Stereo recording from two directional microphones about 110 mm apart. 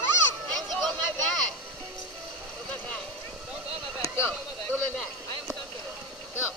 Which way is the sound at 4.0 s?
25° left (ahead or behind).